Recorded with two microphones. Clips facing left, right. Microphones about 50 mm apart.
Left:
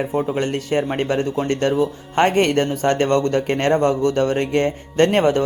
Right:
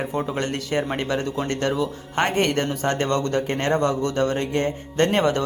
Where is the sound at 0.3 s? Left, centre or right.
Left.